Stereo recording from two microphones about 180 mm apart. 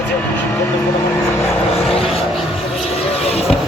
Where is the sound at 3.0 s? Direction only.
35° left (ahead or behind).